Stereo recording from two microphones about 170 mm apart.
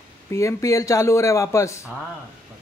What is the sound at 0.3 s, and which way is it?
Speech, 15° left (ahead or behind).